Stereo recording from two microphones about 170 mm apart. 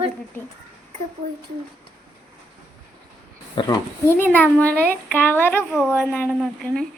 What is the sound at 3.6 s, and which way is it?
Speech, 25° left (ahead or behind).